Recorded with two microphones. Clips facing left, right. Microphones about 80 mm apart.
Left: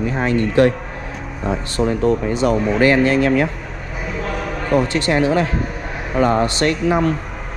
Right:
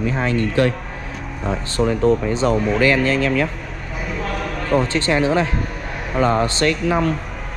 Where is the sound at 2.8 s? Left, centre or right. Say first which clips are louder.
Left 5 dB; left.